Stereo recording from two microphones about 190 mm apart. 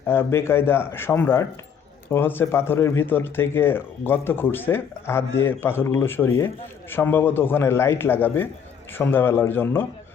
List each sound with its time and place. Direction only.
0.1 s speech: 15° left (ahead or behind)